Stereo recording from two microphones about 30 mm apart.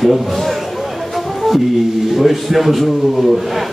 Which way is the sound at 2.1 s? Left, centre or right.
Centre.